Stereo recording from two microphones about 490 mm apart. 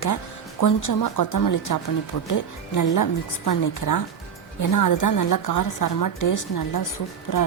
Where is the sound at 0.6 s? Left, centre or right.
Left.